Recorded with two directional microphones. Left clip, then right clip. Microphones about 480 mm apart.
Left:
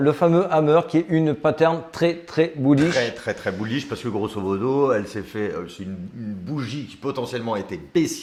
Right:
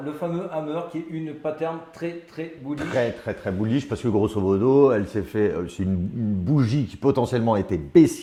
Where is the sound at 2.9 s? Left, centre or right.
Centre.